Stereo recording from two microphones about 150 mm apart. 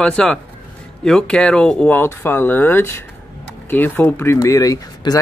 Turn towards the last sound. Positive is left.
turn(degrees=25)  # may be behind; listen again after turning